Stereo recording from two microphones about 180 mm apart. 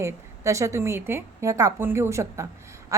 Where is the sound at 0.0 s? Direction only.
15° right (ahead or behind).